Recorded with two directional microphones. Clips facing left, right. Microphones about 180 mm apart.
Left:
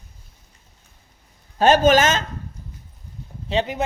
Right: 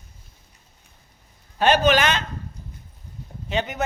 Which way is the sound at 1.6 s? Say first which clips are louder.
Left 3 dB; 45° left (ahead or behind).